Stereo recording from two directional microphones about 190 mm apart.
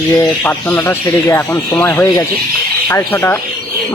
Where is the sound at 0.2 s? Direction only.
10° left (ahead or behind).